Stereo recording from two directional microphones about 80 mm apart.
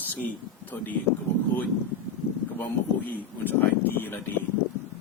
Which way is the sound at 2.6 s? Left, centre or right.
Left.